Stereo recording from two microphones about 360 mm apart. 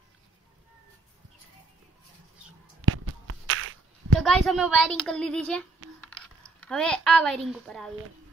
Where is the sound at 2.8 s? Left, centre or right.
Right.